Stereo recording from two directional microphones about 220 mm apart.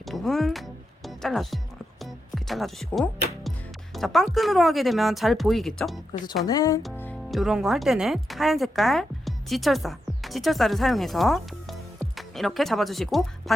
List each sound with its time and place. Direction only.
0.0 s music: centre (ahead or behind)
3.9 s speech: centre (ahead or behind)
6.4 s speech: 15° left (ahead or behind); by 13.2 s centre (ahead or behind)